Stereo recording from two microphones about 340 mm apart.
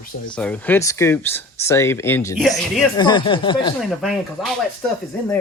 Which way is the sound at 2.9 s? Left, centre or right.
Centre.